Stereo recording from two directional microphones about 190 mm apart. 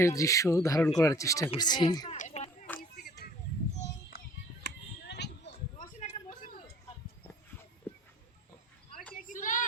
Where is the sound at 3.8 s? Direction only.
55° left (ahead or behind).